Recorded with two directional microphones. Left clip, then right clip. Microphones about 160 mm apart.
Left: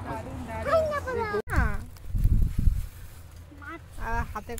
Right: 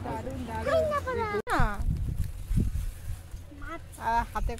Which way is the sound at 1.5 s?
40° right (ahead or behind).